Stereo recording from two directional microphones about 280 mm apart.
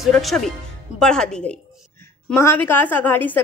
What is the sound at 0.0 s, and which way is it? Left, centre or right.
A woman's voice, centre.